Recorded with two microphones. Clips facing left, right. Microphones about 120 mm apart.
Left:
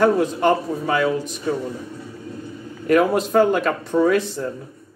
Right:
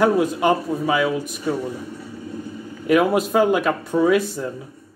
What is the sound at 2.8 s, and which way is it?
A man's voice, 5° right (ahead or behind).